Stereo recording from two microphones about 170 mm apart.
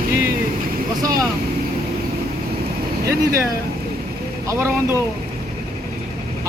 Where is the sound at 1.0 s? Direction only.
20° right (ahead or behind).